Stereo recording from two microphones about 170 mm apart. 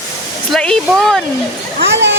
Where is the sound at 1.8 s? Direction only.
90° right.